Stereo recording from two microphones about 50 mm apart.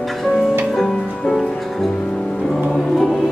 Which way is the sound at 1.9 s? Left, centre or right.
Centre.